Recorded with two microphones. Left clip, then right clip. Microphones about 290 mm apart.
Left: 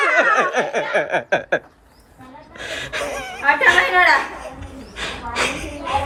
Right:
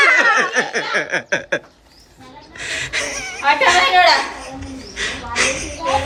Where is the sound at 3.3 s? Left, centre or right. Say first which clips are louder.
Right 1 dB; right.